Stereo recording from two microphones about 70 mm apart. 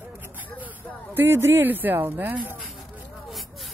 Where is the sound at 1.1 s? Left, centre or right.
Right.